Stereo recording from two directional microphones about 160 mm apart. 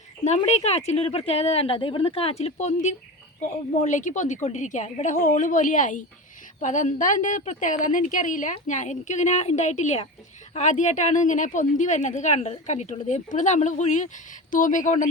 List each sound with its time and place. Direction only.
0.3 s a woman's voice: 45° left (ahead or behind)